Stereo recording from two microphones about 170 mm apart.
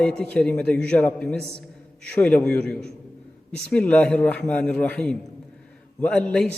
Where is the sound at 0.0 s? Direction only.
5° left (ahead or behind).